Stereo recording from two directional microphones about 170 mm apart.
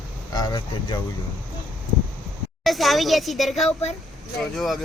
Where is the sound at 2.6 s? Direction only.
Centre (ahead or behind).